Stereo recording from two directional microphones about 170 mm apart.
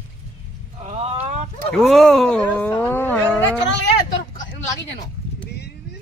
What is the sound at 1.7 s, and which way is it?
Speech, centre (ahead or behind).